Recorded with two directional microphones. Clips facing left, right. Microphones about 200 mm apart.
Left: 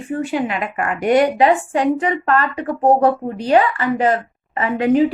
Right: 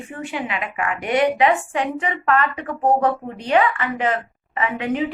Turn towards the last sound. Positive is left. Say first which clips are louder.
# left 7 dB
turn(degrees=40)  # may be behind; listen again after turning